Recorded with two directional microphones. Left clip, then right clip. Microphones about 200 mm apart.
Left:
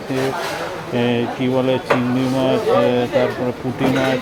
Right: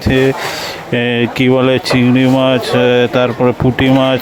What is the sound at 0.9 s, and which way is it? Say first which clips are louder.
Speech: right 6 dB; 40° right (ahead or behind).